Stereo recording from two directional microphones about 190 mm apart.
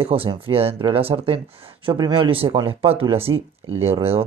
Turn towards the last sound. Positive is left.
turn(degrees=-30)  # may be behind; listen again after turning